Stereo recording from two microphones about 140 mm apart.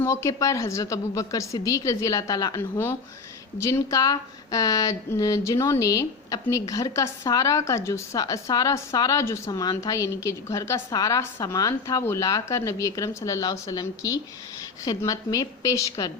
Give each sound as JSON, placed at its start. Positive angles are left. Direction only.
{"t": 0.0, "sound": "speech", "side_deg": 20}